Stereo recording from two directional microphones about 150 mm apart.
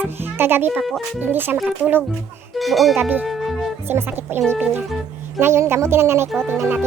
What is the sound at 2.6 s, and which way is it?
Speech, centre (ahead or behind).